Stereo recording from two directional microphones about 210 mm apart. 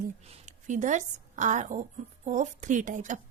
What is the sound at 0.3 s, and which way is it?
A woman's voice, 35° right (ahead or behind).